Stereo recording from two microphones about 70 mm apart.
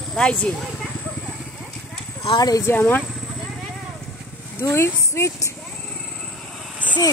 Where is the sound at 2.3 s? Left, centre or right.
Left.